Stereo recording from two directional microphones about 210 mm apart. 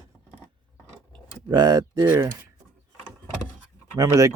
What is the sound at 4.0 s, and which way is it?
Speech, 15° right (ahead or behind).